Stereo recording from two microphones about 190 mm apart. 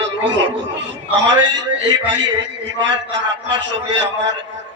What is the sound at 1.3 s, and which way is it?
A man's voice, 70° right (ahead or behind).